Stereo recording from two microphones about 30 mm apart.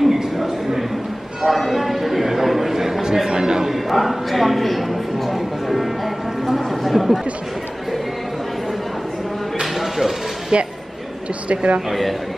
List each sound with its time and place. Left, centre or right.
0.0 s a sound: centre
1.5 s a man's voice: centre
3.7 s speech: centre
9.8 s a sound: centre
10.5 s speech: right
11.9 s speech: centre